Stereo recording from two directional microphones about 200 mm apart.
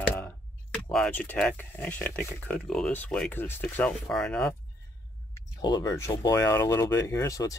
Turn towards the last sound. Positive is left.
turn(degrees=15)  # may be behind; listen again after turning